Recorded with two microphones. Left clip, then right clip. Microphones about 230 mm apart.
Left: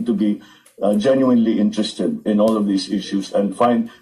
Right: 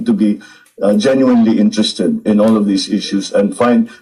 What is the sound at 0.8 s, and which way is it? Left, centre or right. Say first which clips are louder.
A man's voice: right 4 dB; right.